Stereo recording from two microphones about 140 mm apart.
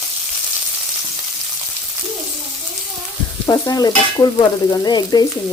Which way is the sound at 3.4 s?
25° left (ahead or behind).